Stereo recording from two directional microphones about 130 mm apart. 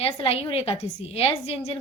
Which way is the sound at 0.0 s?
50° left (ahead or behind).